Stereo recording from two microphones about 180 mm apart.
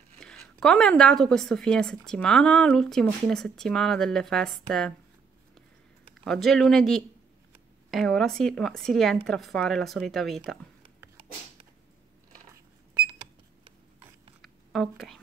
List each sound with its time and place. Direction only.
0.2 s speech: 5° left (ahead or behind)
6.2 s speech: centre (ahead or behind)
12.9 s cash register: 30° right (ahead or behind)
14.4 s a sound: centre (ahead or behind)